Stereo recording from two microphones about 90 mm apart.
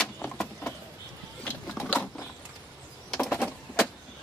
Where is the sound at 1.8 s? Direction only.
Centre (ahead or behind).